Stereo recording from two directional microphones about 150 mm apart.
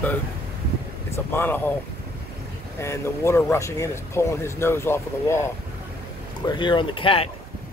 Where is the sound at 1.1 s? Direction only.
15° left (ahead or behind).